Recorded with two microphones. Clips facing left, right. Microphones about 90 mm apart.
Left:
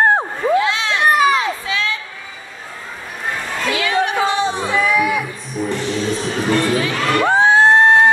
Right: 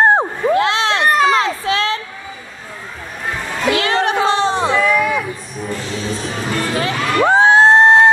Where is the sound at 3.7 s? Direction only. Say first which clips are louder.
Right 2 dB; 60° right (ahead or behind).